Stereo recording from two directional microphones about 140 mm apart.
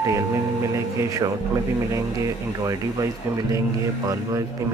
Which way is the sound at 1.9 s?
25° right (ahead or behind).